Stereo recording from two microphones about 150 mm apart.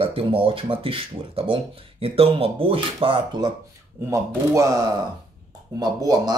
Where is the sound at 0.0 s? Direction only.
40° right (ahead or behind).